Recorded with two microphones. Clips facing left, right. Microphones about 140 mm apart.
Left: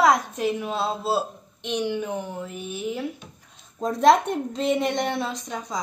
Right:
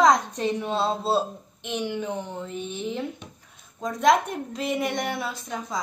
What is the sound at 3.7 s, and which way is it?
A woman's voice, 30° left (ahead or behind).